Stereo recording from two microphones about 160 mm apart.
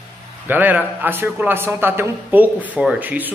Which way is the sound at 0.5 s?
10° right (ahead or behind).